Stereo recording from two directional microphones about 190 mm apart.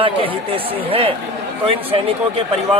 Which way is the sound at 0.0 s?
30° right (ahead or behind).